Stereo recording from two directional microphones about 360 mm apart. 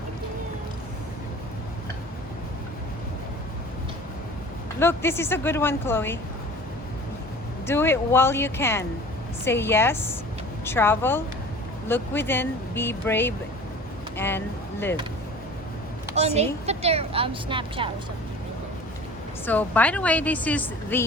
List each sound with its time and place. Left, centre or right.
4.8 s speech: centre
7.7 s a woman's voice: centre
16.1 s a woman's voice: centre
19.5 s a woman's voice: centre